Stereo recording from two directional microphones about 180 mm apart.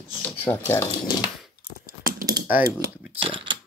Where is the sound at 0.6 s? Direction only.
20° left (ahead or behind).